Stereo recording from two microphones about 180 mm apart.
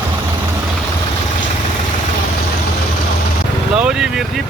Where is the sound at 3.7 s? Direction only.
5° right (ahead or behind).